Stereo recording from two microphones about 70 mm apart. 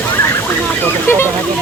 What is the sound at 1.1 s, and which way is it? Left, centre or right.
Speech, left.